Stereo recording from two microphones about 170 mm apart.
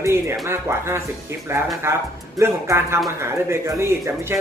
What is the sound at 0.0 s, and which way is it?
Speech, 15° right (ahead or behind).